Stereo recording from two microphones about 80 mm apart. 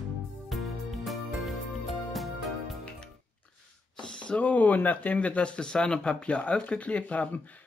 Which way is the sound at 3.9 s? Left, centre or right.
Centre.